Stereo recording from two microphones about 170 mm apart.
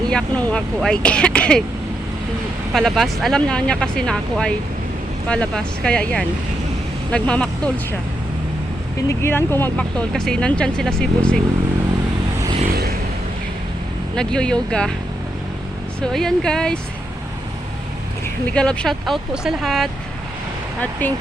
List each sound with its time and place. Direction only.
0.1 s speech: 5° left (ahead or behind)
2.7 s speech: centre (ahead or behind)
9.0 s speech: 15° left (ahead or behind)
12.7 s vehicle: 65° right (ahead or behind)
14.2 s speech: 5° left (ahead or behind)
16.0 s speech: 5° left (ahead or behind)
18.5 s speech: 5° left (ahead or behind)
21.0 s speech: 10° left (ahead or behind)